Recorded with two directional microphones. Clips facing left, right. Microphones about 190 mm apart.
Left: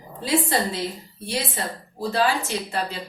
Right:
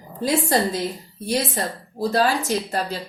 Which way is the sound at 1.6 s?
40° right (ahead or behind).